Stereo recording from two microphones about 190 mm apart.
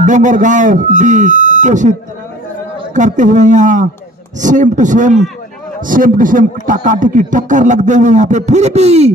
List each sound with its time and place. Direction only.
0.0 s a man's voice: 40° right (ahead or behind)